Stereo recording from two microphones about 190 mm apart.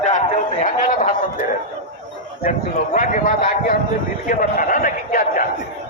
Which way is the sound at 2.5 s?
45° left (ahead or behind).